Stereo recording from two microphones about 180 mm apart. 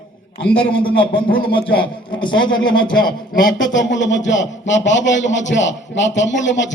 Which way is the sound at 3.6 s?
90° left.